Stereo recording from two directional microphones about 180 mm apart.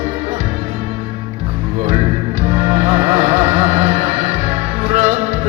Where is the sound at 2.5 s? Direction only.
35° right (ahead or behind).